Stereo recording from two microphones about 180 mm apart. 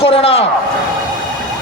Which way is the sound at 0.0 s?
30° left (ahead or behind).